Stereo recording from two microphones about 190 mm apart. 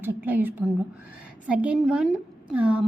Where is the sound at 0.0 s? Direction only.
10° right (ahead or behind).